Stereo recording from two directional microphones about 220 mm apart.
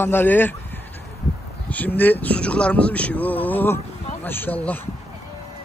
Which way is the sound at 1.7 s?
10° left (ahead or behind).